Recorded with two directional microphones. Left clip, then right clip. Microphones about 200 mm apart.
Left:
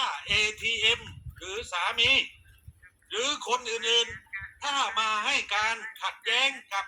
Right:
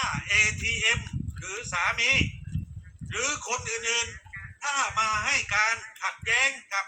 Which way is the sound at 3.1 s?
30° left (ahead or behind).